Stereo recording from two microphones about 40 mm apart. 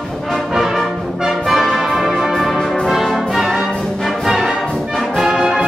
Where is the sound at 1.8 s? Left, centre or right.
Centre.